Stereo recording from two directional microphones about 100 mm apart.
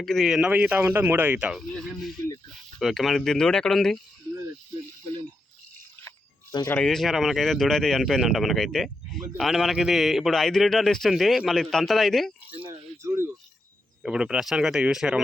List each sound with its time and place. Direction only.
0.0 s speech: 5° left (ahead or behind)
0.3 s speech: 10° right (ahead or behind)
1.7 s speech: centre (ahead or behind)
6.7 s speech: 5° left (ahead or behind)
12.5 s a sound: 15° right (ahead or behind)
14.0 s speech: 10° right (ahead or behind)